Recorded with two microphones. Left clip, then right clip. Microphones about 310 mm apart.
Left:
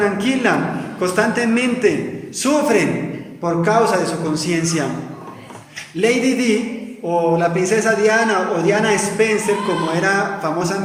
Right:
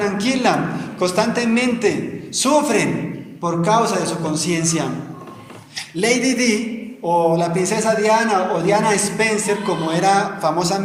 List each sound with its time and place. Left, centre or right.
0.0 s a man's voice: centre
6.0 s a man's voice: centre